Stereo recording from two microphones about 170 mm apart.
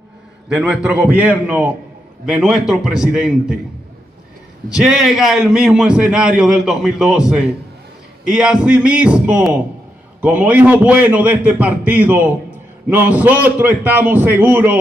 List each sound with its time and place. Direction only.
0.5 s a man's voice: 5° right (ahead or behind)
4.6 s a man's voice: 5° right (ahead or behind)